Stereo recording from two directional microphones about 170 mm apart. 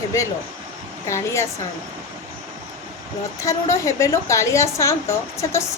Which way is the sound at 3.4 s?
15° left (ahead or behind).